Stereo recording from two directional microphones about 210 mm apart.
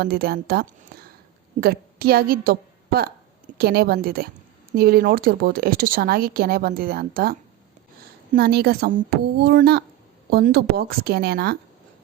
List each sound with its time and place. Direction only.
0.0 s a woman's voice: 50° right (ahead or behind)